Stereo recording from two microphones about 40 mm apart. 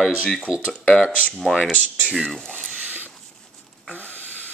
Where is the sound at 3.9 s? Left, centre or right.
Left.